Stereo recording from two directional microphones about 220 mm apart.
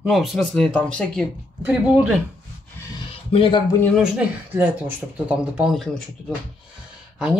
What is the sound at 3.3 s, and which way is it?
Speech, 25° left (ahead or behind).